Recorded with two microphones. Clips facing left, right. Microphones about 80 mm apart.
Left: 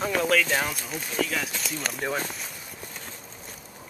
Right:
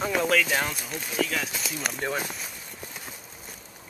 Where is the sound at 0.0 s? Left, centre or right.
Centre.